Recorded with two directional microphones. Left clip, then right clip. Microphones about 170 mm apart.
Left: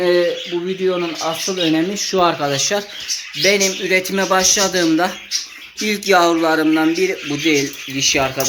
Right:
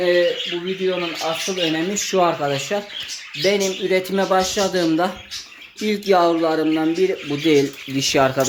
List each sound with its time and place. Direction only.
0.0 s speech: 5° left (ahead or behind)
2.0 s speech: 10° right (ahead or behind)
7.4 s speech: 45° right (ahead or behind)